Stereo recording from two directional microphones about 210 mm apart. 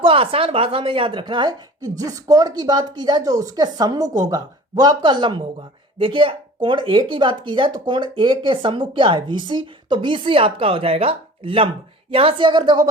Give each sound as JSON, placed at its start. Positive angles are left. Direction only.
{"t": 0.0, "sound": "speech", "side_deg": -25}